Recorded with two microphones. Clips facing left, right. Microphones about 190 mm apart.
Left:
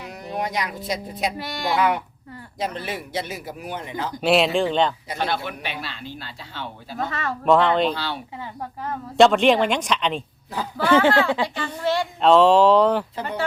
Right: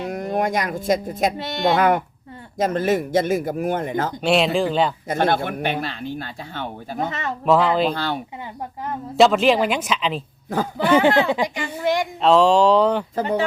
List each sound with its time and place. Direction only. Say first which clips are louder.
0.1 s speech: right 5 dB; 50° right (ahead or behind)
1.4 s speech: right 5 dB; 25° right (ahead or behind)
2.6 s speech: right 9 dB; 45° right (ahead or behind)
4.2 s speech: left 1 dB; centre (ahead or behind)
5.0 s speech: right 6 dB; 50° right (ahead or behind)
6.9 s speech: right 1 dB; 20° right (ahead or behind)
7.4 s speech: even; centre (ahead or behind)
7.9 s speech: right 3 dB; 50° right (ahead or behind)
9.1 s speech: even; centre (ahead or behind)
10.8 s a child's voice: right 1 dB; 15° right (ahead or behind)
12.2 s speech: left 1 dB; centre (ahead or behind)